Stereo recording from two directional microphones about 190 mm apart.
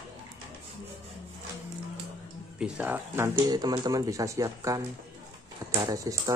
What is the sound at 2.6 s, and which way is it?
Speech, 10° right (ahead or behind).